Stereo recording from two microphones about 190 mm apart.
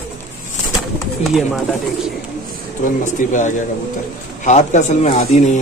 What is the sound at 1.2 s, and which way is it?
Speech, centre (ahead or behind).